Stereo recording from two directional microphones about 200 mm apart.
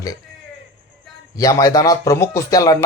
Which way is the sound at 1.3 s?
20° left (ahead or behind).